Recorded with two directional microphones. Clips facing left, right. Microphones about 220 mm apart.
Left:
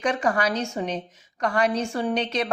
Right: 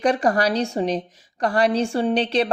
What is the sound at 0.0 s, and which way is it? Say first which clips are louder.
Speech: right 4 dB; 35° right (ahead or behind).